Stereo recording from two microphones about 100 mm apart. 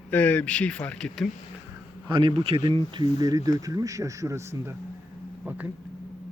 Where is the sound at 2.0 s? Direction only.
55° right (ahead or behind).